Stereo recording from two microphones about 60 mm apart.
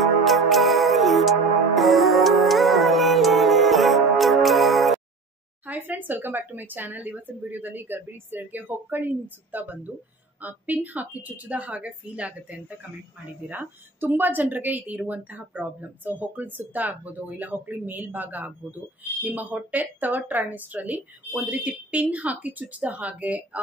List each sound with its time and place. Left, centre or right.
0.0 s music: centre
5.7 s speech: right
13.5 s speech: right